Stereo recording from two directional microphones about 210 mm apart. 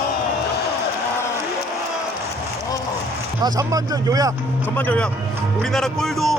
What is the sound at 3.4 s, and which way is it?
Speech, 15° right (ahead or behind).